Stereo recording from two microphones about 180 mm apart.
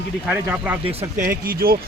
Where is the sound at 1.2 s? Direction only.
55° right (ahead or behind).